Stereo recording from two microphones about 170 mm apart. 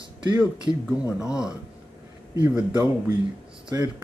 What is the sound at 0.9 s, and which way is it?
Speech, 5° right (ahead or behind).